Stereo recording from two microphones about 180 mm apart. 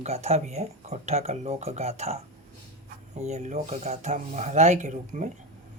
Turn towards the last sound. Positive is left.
turn(degrees=-45)  # may be behind; listen again after turning